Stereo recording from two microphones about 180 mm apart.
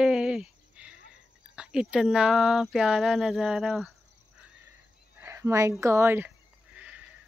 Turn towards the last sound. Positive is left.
turn(degrees=-10)  # may be behind; listen again after turning